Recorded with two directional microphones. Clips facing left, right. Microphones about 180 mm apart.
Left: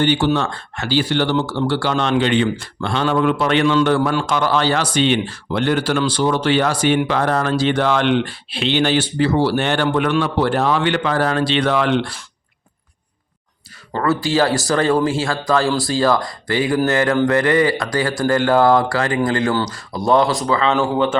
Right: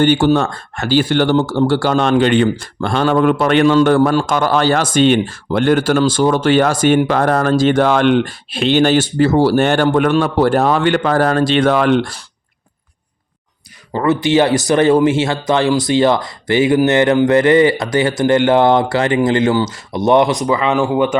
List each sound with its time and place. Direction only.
0.0 s speech: 45° right (ahead or behind)
13.9 s speech: 20° right (ahead or behind)